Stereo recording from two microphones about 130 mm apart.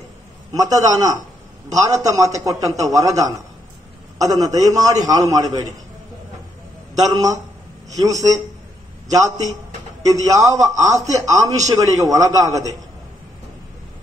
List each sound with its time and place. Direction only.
0.5 s a man's voice: 30° right (ahead or behind)
7.0 s a man's voice: 30° right (ahead or behind)
10.0 s a man's voice: 25° right (ahead or behind)